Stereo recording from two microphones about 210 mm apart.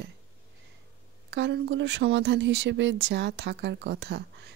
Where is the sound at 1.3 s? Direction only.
55° right (ahead or behind).